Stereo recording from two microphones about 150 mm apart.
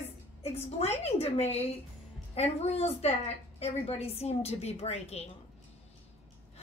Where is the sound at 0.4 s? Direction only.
45° left (ahead or behind).